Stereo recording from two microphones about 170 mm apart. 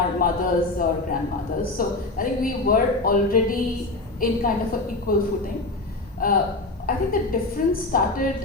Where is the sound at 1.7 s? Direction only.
55° left (ahead or behind).